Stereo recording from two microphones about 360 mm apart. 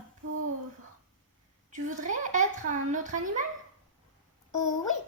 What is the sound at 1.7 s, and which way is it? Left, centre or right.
A child's voice, right.